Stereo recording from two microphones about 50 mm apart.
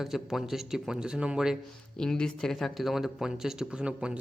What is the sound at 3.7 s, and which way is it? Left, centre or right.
Speech, right.